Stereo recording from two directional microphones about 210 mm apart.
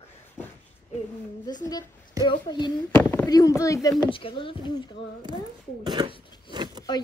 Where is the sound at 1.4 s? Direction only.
20° left (ahead or behind).